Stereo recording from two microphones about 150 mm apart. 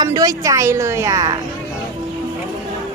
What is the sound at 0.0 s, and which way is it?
A woman's voice, 25° right (ahead or behind).